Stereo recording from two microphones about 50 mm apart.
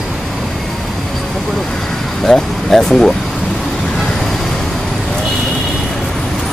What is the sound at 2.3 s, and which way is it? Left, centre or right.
Speech, centre.